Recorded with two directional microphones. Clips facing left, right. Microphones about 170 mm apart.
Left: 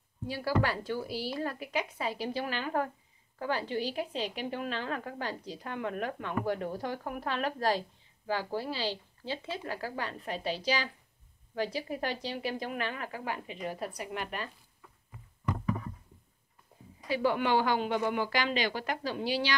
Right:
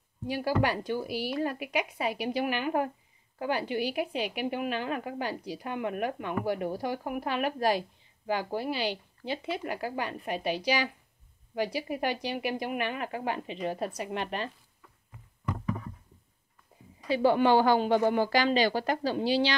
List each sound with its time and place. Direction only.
0.3 s a woman's voice: 15° right (ahead or behind)
17.1 s speech: 30° right (ahead or behind)